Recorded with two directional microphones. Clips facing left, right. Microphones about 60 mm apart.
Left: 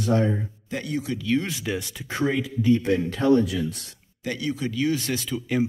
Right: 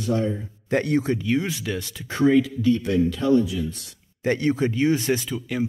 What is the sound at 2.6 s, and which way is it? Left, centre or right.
Speech, left.